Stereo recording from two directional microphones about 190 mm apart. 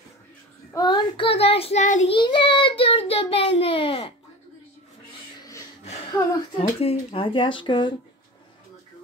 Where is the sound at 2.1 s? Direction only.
25° left (ahead or behind).